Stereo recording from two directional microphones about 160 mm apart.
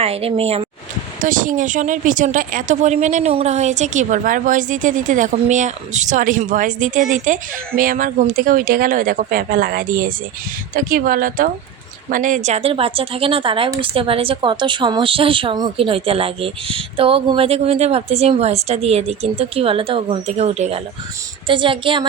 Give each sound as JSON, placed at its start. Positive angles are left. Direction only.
{"t": 0.0, "sound": "speech", "side_deg": -35}
{"t": 1.2, "sound": "a woman's voice", "side_deg": -55}